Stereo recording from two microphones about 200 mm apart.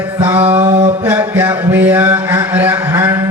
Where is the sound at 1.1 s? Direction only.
10° right (ahead or behind).